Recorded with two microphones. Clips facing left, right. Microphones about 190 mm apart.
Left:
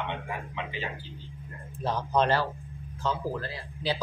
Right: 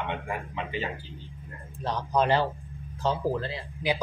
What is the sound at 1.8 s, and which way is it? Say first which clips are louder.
Speech: even; 5° left (ahead or behind).